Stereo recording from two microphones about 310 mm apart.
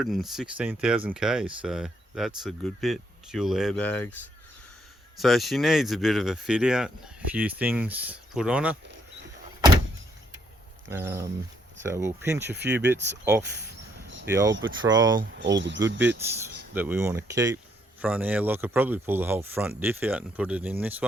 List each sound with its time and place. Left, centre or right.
0.0 s speech: centre
10.8 s speech: centre
12.5 s speech: right
13.1 s speech: centre
15.2 s speech: right
16.7 s speech: centre